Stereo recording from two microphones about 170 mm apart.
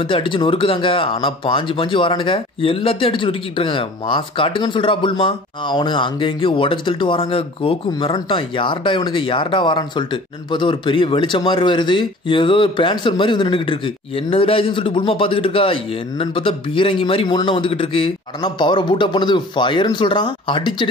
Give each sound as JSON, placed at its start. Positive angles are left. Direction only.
{"t": 0.0, "sound": "speech", "side_deg": 30}